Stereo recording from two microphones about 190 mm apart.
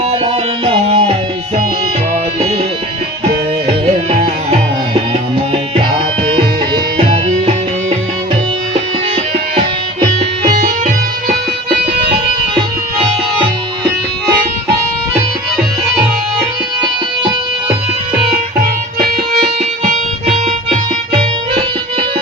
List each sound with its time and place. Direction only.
0.3 s music: 30° right (ahead or behind)
5.7 s music: 25° right (ahead or behind)
10.4 s music: 45° right (ahead or behind)
19.8 s music: 40° right (ahead or behind)